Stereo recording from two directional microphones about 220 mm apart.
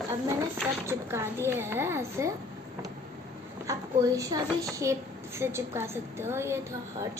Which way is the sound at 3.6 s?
15° right (ahead or behind).